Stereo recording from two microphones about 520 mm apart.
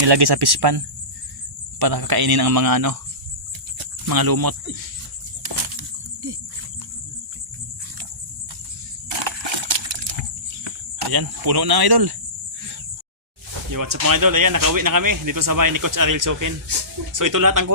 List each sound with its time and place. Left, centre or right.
0.0 s speech: right
1.8 s speech: right
4.0 s speech: right
9.0 s coin: right
10.6 s speech: right
13.7 s speech: right